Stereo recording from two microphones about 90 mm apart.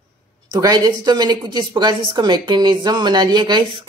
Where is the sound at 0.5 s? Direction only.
45° right (ahead or behind).